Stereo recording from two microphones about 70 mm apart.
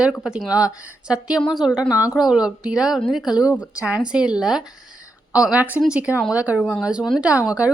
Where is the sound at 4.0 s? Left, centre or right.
Centre.